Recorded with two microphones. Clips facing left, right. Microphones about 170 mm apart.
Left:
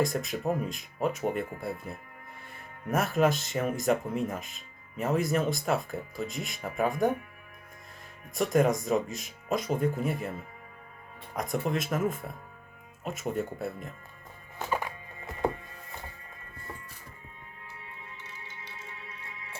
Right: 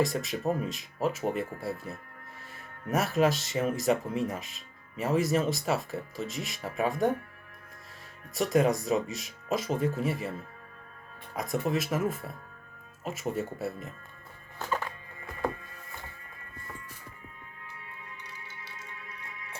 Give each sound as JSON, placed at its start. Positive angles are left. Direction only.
{"t": 0.0, "sound": "speech", "side_deg": 0}
{"t": 2.9, "sound": "speech", "side_deg": 0}
{"t": 8.4, "sound": "speech", "side_deg": 0}
{"t": 11.3, "sound": "speech", "side_deg": 0}
{"t": 14.6, "sound": "music", "side_deg": 15}
{"t": 18.6, "sound": "music", "side_deg": 20}